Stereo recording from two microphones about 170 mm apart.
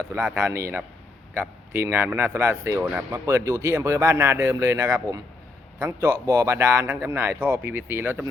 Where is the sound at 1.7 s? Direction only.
15° right (ahead or behind).